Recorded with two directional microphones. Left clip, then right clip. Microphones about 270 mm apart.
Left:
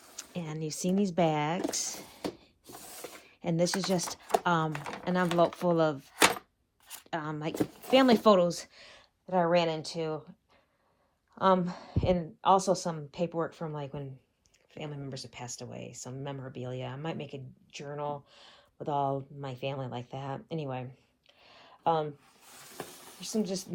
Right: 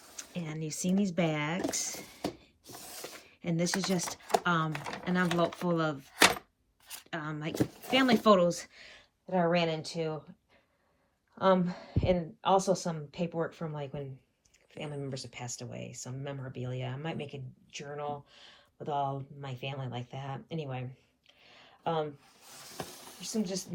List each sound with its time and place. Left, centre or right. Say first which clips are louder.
0.2 s speech: left 2 dB; centre
2.8 s a sound: right 1 dB; centre
3.1 s speech: left 4 dB; centre
6.8 s a sound: left 3 dB; centre
7.6 s speech: left 4 dB; centre
11.3 s speech: left 1 dB; centre
15.3 s speech: even; centre
21.4 s a sound: left 6 dB; centre
23.2 s speech: left 2 dB; centre